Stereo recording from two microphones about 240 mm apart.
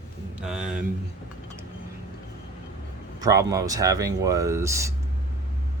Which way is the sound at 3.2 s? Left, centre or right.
Centre.